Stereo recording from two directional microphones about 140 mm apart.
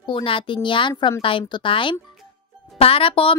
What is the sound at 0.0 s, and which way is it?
A woman's voice, 40° left (ahead or behind).